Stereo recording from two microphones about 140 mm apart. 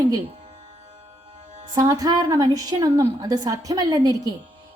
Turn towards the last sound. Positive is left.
turn(degrees=-25)  # may be behind; listen again after turning